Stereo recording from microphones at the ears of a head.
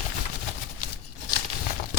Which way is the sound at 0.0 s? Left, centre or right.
Left.